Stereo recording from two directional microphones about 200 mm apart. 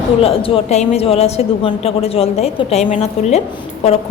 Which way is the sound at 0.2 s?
30° left (ahead or behind).